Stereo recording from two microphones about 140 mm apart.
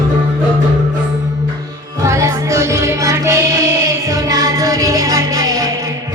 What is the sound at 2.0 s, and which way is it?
Music, 20° right (ahead or behind).